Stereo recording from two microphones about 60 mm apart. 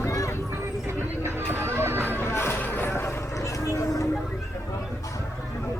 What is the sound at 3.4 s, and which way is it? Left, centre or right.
Vehicle, left.